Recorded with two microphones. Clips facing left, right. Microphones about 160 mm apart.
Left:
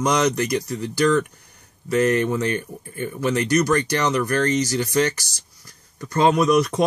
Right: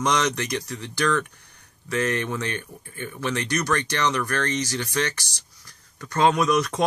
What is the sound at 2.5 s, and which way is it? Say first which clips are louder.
Speech: left 7 dB; 40° left (ahead or behind).